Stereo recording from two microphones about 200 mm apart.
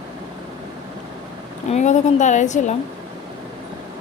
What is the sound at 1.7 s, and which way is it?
Speech, 35° left (ahead or behind).